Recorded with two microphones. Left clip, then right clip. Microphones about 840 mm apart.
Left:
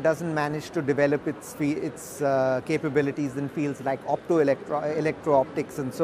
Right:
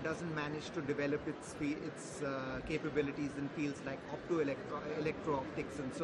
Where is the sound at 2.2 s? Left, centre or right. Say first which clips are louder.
Left 18 dB; left.